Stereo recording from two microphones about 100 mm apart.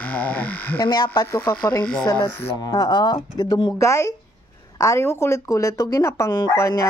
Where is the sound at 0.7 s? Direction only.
45° left (ahead or behind).